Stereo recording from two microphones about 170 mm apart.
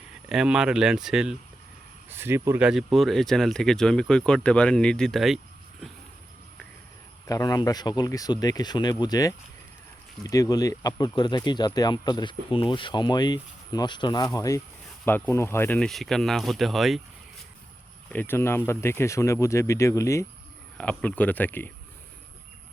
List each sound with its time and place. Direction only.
0.3 s speech: 5° right (ahead or behind)
7.3 s speech: 20° left (ahead or behind); by 17.0 s centre (ahead or behind)
18.1 s speech: 10° left (ahead or behind)